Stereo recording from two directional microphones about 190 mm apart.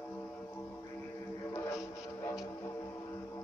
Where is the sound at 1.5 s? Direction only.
15° left (ahead or behind).